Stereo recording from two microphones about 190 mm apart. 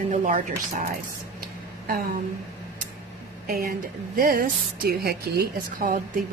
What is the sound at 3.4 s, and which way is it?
A woman's voice, 50° right (ahead or behind).